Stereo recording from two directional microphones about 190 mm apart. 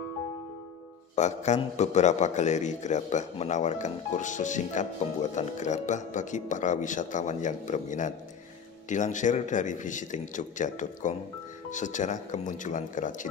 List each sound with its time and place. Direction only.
1.1 s a man's voice: 40° left (ahead or behind)